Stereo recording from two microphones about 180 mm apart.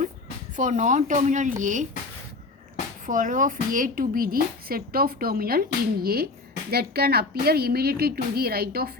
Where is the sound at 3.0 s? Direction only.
45° right (ahead or behind).